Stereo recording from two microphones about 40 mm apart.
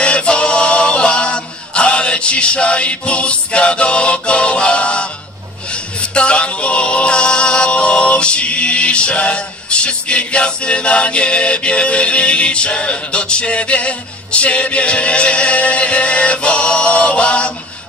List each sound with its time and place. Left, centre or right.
0.0 s male singing: left
6.1 s a capella: left